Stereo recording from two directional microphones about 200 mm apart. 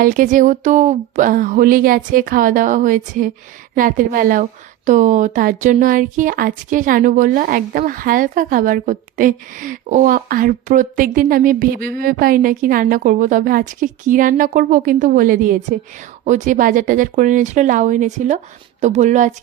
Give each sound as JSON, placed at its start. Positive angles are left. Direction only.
{"t": 0.0, "sound": "speech", "side_deg": -45}